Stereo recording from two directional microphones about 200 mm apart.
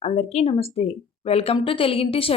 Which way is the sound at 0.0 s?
30° left (ahead or behind).